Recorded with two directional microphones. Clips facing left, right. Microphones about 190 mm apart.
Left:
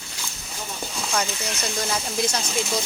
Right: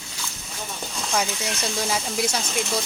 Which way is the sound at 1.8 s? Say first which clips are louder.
Even; 5° right (ahead or behind).